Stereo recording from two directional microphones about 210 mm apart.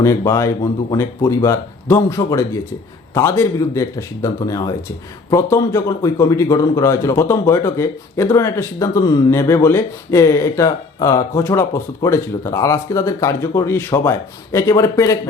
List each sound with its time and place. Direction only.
0.0 s speech: 15° left (ahead or behind)